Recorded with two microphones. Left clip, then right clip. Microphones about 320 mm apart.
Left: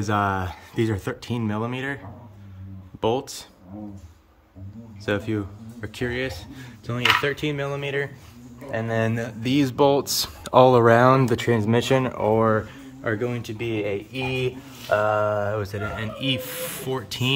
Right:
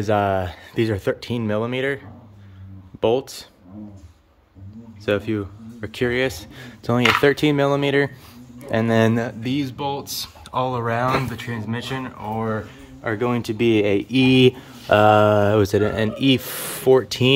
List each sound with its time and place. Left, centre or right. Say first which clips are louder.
0.0 s speech: right 4 dB; centre
3.0 s speech: right 4 dB; centre
5.0 s speech: right 4 dB; centre; by 9.1 s right
9.1 s speech: right 6 dB; centre
9.4 s speech: left 6 dB; centre
13.0 s speech: right 3 dB; centre
13.3 s speech: right 9 dB; centre